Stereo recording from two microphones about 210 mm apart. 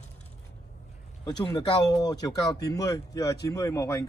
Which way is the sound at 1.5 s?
20° left (ahead or behind).